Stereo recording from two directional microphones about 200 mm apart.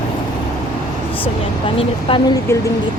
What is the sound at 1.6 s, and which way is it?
Speech, 25° left (ahead or behind).